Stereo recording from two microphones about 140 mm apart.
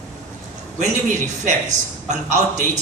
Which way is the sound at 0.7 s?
60° right (ahead or behind).